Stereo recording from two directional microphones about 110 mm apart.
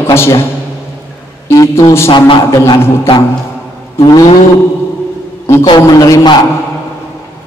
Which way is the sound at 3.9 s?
35° left (ahead or behind).